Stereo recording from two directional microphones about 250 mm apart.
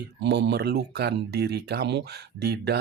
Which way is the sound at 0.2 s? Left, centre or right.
Right.